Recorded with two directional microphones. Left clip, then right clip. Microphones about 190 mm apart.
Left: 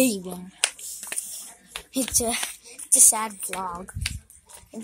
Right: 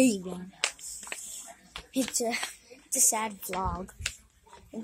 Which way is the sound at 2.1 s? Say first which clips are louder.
Left 6 dB; centre (ahead or behind).